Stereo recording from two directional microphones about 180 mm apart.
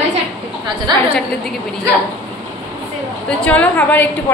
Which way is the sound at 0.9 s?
25° right (ahead or behind).